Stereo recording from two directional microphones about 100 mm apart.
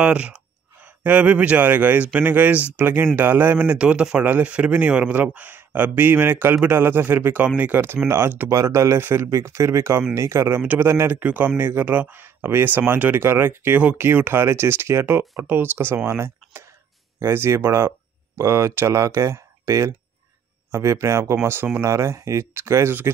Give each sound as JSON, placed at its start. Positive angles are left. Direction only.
{"t": 0.0, "sound": "speech", "side_deg": -10}